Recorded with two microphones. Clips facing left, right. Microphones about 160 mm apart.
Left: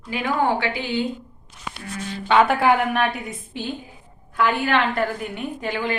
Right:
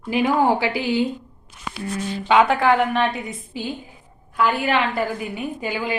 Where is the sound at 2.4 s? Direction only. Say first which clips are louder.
Right 1 dB; 5° left (ahead or behind).